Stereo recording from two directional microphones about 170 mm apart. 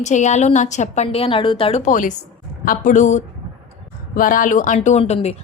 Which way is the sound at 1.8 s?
50° left (ahead or behind).